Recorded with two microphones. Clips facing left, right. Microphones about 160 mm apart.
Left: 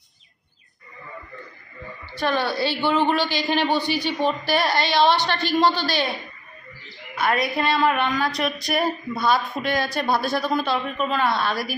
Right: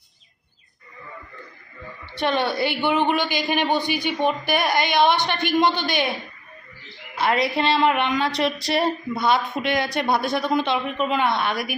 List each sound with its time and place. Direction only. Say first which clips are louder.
2.1 s a woman's voice: right 1 dB; 20° right (ahead or behind)